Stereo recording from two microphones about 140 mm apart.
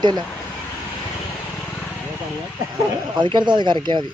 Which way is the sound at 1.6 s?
10° left (ahead or behind).